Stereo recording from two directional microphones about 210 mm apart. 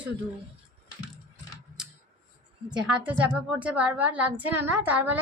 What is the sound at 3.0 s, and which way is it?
A woman's voice, 5° right (ahead or behind).